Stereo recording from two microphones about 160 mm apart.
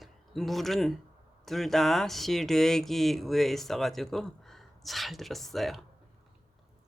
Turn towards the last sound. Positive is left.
turn(degrees=0)  # may be behind; listen again after turning